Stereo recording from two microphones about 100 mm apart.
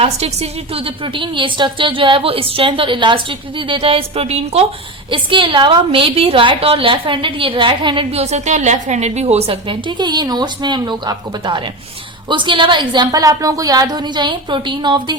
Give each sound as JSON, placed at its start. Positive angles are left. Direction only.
{"t": 0.0, "sound": "a woman's voice", "side_deg": -90}
{"t": 5.1, "sound": "a woman's voice", "side_deg": -55}
{"t": 8.1, "sound": "a woman's voice", "side_deg": -90}